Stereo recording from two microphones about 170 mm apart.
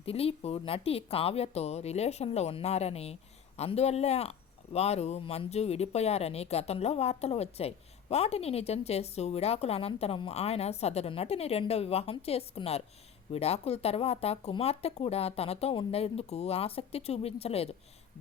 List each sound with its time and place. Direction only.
0.0 s a woman's voice: 35° left (ahead or behind)